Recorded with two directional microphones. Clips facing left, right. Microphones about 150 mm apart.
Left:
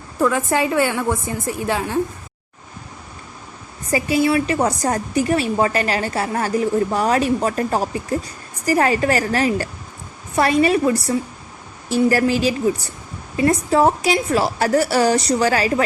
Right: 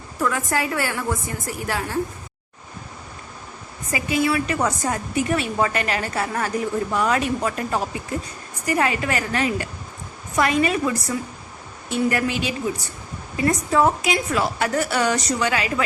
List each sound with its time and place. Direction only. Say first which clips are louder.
0.2 s a woman's voice: left 5 dB; 25° left (ahead or behind)
3.9 s a woman's voice: left 4 dB; 30° left (ahead or behind)